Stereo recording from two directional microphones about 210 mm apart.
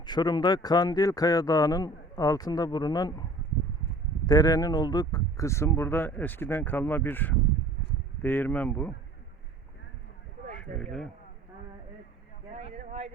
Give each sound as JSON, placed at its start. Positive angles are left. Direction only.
{"t": 0.0, "sound": "speech", "side_deg": 20}
{"t": 4.3, "sound": "speech", "side_deg": 15}
{"t": 10.8, "sound": "speech", "side_deg": 5}
{"t": 12.5, "sound": "a sound", "side_deg": -30}